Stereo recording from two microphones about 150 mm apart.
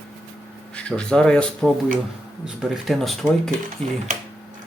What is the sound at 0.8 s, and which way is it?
Speech, 5° left (ahead or behind).